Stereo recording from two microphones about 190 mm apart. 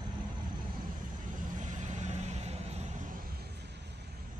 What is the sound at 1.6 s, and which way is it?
Vehicle, 40° right (ahead or behind).